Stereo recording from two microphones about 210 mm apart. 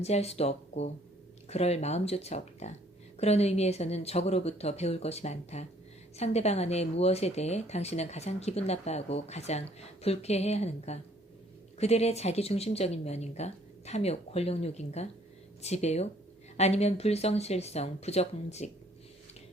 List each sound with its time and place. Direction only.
0.0 s speech: 30° left (ahead or behind)